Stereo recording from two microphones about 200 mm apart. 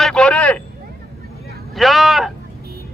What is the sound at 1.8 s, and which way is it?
Speech, centre (ahead or behind).